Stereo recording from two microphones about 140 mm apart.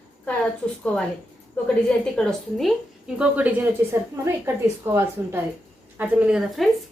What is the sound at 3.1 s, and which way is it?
A woman's voice, 10° right (ahead or behind).